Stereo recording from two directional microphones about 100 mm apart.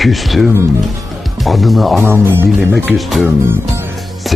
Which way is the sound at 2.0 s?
30° right (ahead or behind).